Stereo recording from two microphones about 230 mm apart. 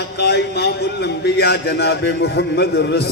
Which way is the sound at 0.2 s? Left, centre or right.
Left.